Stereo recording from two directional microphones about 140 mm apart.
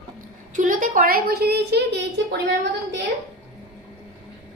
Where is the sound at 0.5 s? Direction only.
70° right (ahead or behind); by 1.4 s 90° right.